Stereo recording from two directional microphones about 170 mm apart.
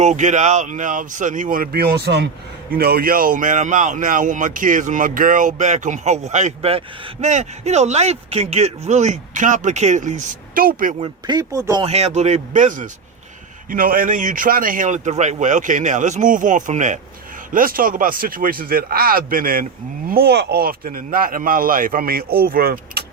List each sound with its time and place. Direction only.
0.0 s speech: 45° right (ahead or behind); by 2.3 s 85° right
2.7 s speech: 65° right (ahead or behind)
11.0 s speech: 25° right (ahead or behind)
11.8 s speech: 40° right (ahead or behind); by 23.0 s 60° right (ahead or behind)